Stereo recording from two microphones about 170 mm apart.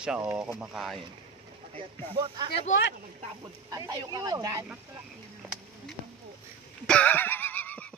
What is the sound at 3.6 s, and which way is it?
Speech, 20° right (ahead or behind).